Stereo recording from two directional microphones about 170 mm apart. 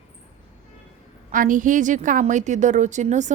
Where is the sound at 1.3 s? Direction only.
50° right (ahead or behind).